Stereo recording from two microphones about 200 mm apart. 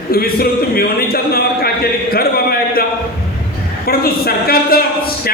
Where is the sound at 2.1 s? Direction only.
50° left (ahead or behind).